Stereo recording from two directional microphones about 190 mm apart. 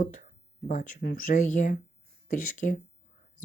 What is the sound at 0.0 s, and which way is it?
Speech, 45° left (ahead or behind).